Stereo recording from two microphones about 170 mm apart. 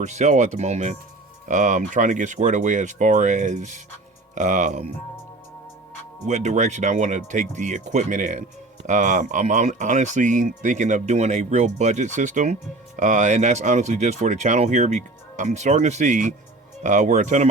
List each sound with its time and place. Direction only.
0.0 s speech: 45° right (ahead or behind)
6.2 s speech: 45° right (ahead or behind)